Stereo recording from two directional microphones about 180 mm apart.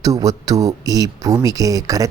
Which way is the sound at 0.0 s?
20° right (ahead or behind).